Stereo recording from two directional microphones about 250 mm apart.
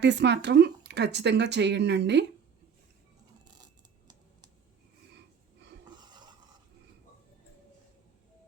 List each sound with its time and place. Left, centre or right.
0.0 s speech: right
6.0 s filing: centre